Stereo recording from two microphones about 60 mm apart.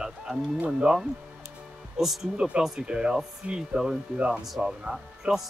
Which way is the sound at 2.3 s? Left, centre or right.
Centre.